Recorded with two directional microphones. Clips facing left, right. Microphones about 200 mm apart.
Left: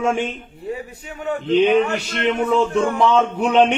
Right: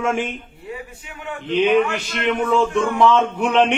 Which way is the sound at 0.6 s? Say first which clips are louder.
Left 6 dB; 40° left (ahead or behind).